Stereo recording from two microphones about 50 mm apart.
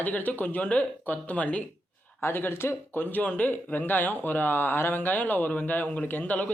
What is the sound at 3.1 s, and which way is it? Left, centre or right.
Speech, left.